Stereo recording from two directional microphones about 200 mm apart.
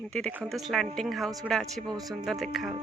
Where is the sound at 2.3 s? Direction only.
Centre (ahead or behind).